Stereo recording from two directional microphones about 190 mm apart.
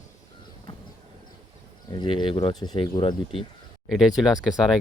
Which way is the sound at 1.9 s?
25° left (ahead or behind).